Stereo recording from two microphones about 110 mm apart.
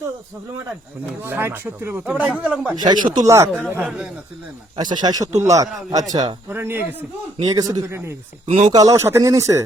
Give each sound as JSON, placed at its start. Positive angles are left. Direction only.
{"t": 1.2, "sound": "speech", "side_deg": -20}
{"t": 2.8, "sound": "speech", "side_deg": -40}
{"t": 3.2, "sound": "speech", "side_deg": -25}
{"t": 3.8, "sound": "speech", "side_deg": 0}
{"t": 4.8, "sound": "speech", "side_deg": -40}
{"t": 6.5, "sound": "speech", "side_deg": -20}
{"t": 7.4, "sound": "speech", "side_deg": -35}
{"t": 8.4, "sound": "speech", "side_deg": -90}
{"t": 8.7, "sound": "speech", "side_deg": -30}